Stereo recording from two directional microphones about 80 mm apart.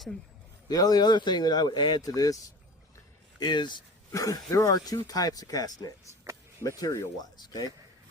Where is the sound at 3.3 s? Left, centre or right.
Left.